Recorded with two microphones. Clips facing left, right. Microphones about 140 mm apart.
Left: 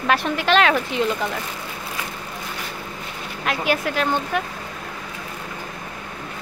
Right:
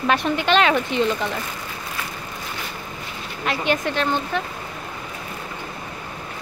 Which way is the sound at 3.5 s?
5° left (ahead or behind).